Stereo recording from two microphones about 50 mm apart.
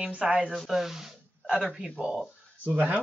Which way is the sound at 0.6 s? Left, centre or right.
Centre.